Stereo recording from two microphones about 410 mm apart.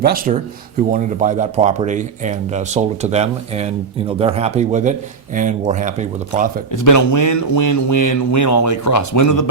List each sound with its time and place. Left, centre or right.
0.0 s speech: right
6.7 s speech: left